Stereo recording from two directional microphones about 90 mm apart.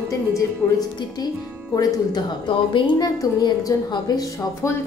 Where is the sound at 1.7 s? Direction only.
45° left (ahead or behind).